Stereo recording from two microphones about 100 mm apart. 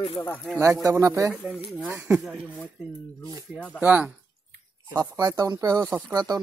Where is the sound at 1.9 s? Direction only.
20° right (ahead or behind).